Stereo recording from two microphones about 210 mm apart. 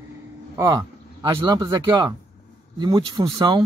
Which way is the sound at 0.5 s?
20° right (ahead or behind).